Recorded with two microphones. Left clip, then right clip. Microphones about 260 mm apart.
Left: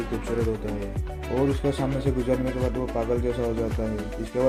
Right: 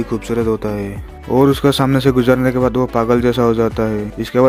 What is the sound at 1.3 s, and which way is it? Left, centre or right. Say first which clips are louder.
Speech: right 12 dB; right.